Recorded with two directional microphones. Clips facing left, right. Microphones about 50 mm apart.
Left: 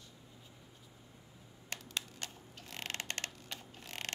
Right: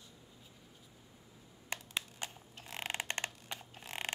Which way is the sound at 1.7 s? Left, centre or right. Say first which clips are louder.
Right 2 dB; centre.